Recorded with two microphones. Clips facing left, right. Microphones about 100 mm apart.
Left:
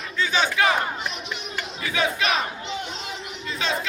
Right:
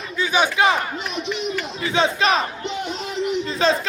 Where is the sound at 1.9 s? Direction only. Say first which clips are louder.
Right 5 dB; 30° right (ahead or behind).